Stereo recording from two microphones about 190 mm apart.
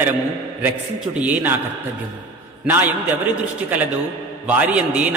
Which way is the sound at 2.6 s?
10° right (ahead or behind).